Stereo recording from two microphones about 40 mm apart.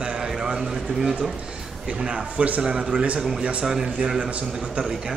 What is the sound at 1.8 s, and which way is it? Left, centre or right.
Speech, right.